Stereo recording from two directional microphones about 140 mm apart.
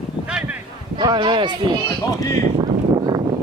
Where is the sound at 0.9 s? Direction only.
35° right (ahead or behind).